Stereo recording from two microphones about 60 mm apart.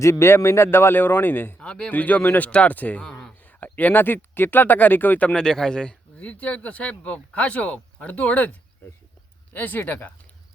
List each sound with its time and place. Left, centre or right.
0.0 s a man's voice: left
1.5 s speech: centre
1.9 s speech: left
3.1 s a sound: centre
3.6 s speech: left
5.3 s speech: centre; by 10.1 s left